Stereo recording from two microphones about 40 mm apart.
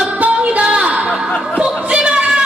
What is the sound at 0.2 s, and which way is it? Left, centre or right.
Music, right.